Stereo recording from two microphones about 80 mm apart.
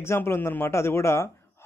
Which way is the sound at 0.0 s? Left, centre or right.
Left.